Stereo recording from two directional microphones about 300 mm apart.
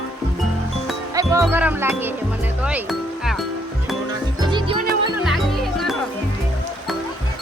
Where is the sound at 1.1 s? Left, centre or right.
Centre.